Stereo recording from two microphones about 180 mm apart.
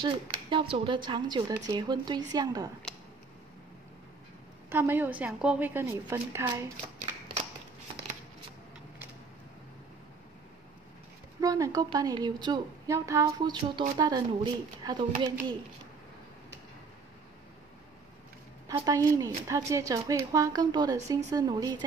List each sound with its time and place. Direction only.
0.0 s a woman's voice: 25° right (ahead or behind)
4.6 s a woman's voice: 10° right (ahead or behind)
11.4 s a woman's voice: 20° right (ahead or behind)
18.8 s a woman's voice: 20° right (ahead or behind)